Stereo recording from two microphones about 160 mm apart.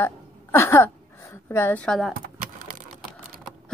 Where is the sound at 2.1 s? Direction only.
60° right (ahead or behind).